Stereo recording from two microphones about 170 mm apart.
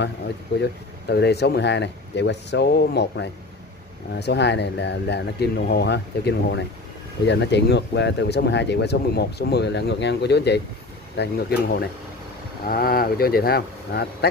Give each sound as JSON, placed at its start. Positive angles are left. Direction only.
{"t": 0.6, "sound": "speech", "side_deg": 75}
{"t": 11.1, "sound": "speech", "side_deg": 65}